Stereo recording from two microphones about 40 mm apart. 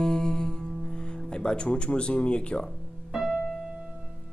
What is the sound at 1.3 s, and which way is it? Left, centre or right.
Speech, left.